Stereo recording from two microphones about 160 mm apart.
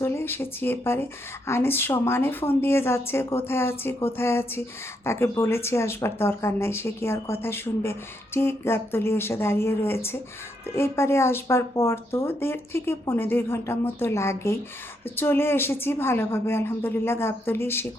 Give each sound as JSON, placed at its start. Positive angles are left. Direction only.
{"t": 0.0, "sound": "speech", "side_deg": 15}